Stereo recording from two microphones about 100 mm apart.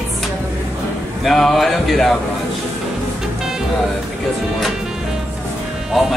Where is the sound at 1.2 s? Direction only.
Centre (ahead or behind).